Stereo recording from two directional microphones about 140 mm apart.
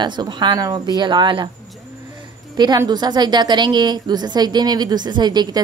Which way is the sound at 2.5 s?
30° right (ahead or behind).